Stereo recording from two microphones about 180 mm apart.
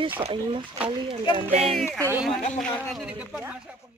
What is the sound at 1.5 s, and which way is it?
Speech, 35° right (ahead or behind).